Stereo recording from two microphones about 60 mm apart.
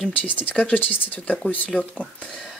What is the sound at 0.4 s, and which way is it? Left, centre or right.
Speech, left.